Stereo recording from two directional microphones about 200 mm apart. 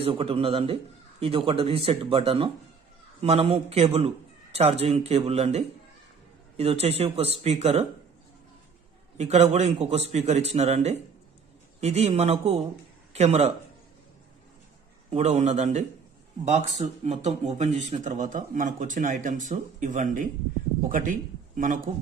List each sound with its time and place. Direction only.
0.0 s a man's voice: 25° right (ahead or behind)
9.2 s a man's voice: 35° right (ahead or behind)
15.0 s a man's voice: 30° right (ahead or behind)